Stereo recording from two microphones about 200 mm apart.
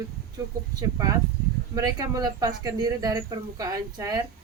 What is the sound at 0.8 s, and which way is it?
A woman's voice, 20° right (ahead or behind).